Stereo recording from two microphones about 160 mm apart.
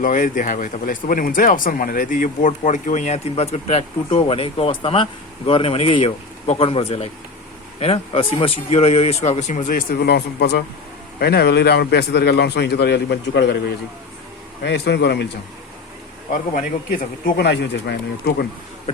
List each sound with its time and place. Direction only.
0.0 s a man's voice: 55° left (ahead or behind); by 15.3 s 90° left
16.3 s speech: 60° left (ahead or behind); by 18.4 s 90° left